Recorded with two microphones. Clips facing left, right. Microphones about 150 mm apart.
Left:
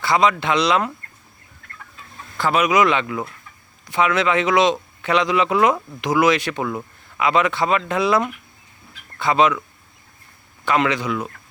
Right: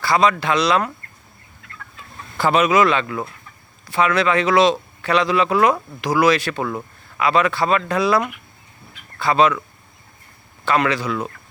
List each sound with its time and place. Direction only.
0.0 s speech: 20° left (ahead or behind)
2.6 s speech: 15° left (ahead or behind)
10.7 s speech: 20° left (ahead or behind)